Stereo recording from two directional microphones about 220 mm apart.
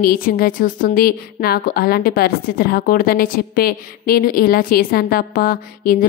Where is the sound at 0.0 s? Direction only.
40° left (ahead or behind).